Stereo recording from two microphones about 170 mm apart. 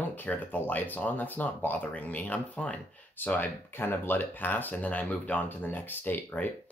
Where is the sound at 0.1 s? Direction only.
10° left (ahead or behind).